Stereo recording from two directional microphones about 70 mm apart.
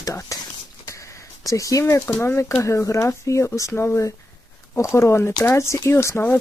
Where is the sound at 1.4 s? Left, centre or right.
Left.